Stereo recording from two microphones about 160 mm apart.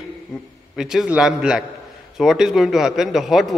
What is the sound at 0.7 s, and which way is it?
A man's voice, 5° right (ahead or behind).